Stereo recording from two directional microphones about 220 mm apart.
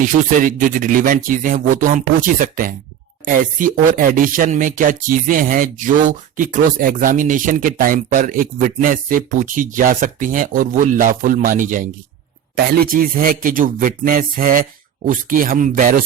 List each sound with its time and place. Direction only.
0.0 s speech: 35° right (ahead or behind)